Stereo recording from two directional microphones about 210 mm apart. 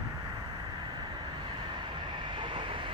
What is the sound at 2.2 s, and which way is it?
Train, 25° right (ahead or behind).